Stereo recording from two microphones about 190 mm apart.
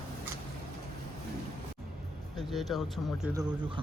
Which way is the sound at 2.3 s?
Centre (ahead or behind).